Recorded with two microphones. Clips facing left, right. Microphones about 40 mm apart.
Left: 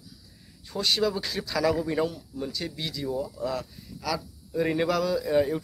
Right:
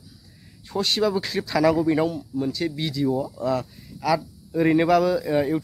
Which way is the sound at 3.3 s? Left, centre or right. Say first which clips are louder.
Right 6 dB; centre.